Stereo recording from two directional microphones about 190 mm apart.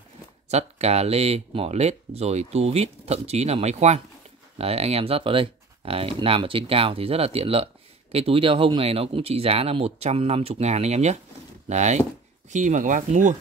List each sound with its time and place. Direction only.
0.5 s speech: 35° right (ahead or behind)